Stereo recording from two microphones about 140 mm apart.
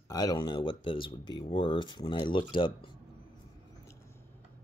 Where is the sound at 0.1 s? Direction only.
25° left (ahead or behind).